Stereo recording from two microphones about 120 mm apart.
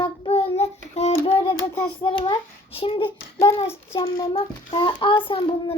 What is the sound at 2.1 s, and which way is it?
Child singing, 45° left (ahead or behind).